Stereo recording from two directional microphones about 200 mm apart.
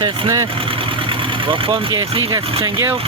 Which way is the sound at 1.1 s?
25° right (ahead or behind).